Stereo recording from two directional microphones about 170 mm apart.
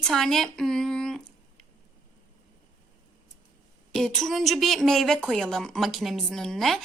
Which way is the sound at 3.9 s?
5° left (ahead or behind).